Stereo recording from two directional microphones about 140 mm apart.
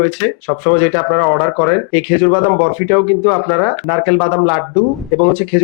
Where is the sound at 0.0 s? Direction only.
15° left (ahead or behind).